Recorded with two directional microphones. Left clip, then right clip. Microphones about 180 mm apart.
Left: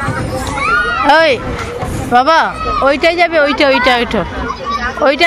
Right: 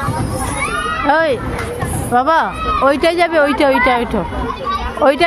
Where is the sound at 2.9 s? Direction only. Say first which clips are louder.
Left 2 dB; 25° right (ahead or behind); by 4.2 s 10° right (ahead or behind).